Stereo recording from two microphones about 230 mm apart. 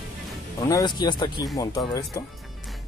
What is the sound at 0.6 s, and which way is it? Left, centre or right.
Speech, centre.